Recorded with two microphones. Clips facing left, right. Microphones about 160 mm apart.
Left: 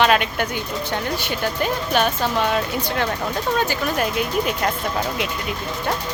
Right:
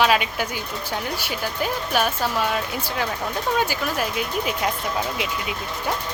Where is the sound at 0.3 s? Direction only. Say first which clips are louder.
Left 3 dB; 5° right (ahead or behind).